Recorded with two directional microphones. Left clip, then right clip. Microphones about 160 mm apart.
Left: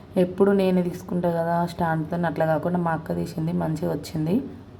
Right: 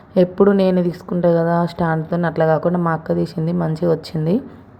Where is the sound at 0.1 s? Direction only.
30° right (ahead or behind).